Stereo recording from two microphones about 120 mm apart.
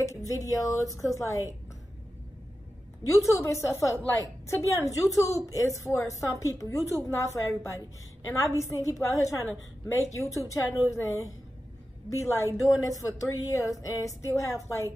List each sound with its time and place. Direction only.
0.3 s a woman's voice: 25° left (ahead or behind)
3.1 s a woman's voice: 25° left (ahead or behind)